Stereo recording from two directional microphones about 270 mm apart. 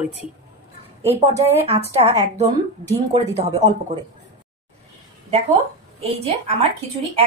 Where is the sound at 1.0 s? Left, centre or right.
Right.